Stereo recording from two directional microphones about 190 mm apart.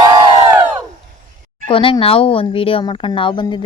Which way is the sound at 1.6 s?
30° left (ahead or behind).